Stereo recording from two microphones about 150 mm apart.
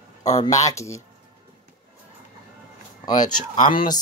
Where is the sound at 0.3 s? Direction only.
50° left (ahead or behind).